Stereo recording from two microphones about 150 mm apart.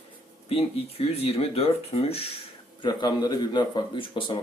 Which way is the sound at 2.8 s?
30° left (ahead or behind).